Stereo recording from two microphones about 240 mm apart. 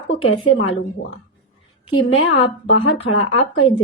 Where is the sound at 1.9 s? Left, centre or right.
Left.